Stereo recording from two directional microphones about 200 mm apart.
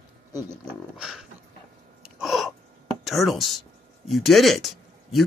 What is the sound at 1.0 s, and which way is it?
Speech, 5° right (ahead or behind).